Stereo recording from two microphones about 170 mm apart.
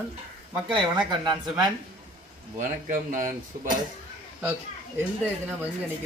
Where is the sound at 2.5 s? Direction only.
50° right (ahead or behind).